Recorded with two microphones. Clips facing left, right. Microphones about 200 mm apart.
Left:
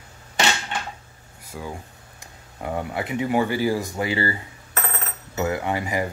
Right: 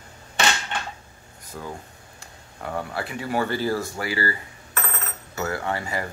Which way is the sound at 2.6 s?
20° left (ahead or behind).